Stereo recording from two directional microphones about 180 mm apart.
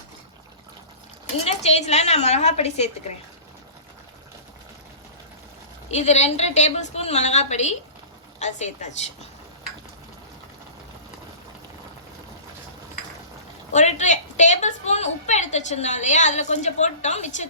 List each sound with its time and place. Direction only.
1.5 s a woman's voice: 35° left (ahead or behind)
5.9 s a woman's voice: 40° left (ahead or behind)
13.7 s a woman's voice: 40° left (ahead or behind)